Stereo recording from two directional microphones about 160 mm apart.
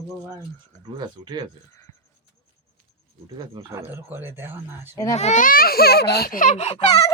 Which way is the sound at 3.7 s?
15° right (ahead or behind).